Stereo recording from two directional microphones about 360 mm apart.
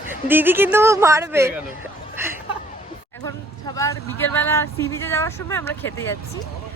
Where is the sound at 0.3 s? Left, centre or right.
Centre.